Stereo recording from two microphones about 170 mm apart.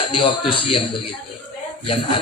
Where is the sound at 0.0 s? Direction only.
30° left (ahead or behind).